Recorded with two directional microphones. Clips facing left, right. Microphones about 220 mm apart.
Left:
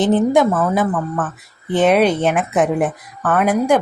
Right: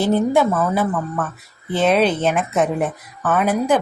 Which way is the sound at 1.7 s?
15° left (ahead or behind).